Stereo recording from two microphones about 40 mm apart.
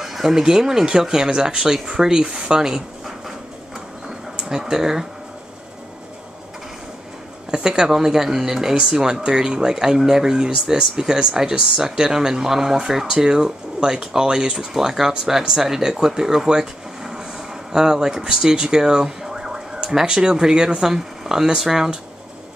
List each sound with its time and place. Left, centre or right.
0.0 s speech: centre
4.4 s speech: centre
7.5 s speech: centre